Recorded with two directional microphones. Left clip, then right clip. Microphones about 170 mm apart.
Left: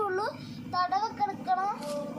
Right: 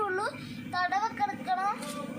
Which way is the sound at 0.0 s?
10° right (ahead or behind).